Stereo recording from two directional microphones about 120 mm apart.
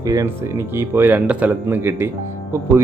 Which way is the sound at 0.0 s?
30° right (ahead or behind).